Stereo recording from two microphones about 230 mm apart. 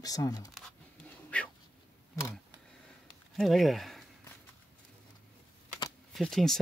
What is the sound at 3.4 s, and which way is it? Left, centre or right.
Speech, centre.